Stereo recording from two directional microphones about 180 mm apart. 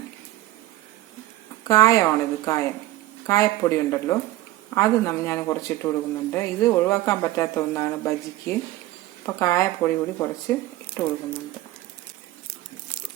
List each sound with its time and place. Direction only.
1.6 s a woman's voice: 20° left (ahead or behind)